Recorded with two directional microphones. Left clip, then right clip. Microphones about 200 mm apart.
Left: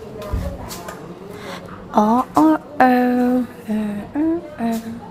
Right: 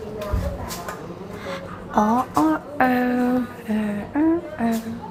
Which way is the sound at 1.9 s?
35° left (ahead or behind).